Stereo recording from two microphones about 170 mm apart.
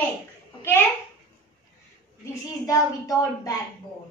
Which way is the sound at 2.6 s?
20° left (ahead or behind).